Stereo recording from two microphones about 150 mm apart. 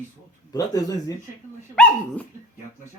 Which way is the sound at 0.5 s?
25° left (ahead or behind).